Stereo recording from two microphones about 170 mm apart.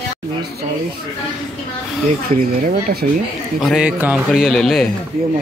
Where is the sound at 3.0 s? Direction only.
60° right (ahead or behind).